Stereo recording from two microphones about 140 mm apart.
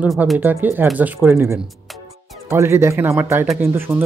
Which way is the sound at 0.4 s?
15° right (ahead or behind).